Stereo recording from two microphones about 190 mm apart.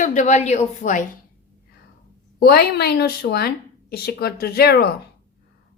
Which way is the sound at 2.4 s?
55° left (ahead or behind).